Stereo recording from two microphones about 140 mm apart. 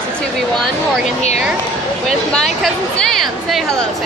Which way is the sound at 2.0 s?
Centre (ahead or behind).